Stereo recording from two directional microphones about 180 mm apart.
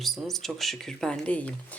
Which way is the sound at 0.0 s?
Centre (ahead or behind).